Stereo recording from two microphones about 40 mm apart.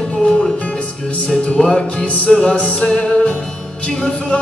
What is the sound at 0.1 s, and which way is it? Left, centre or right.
Music, left.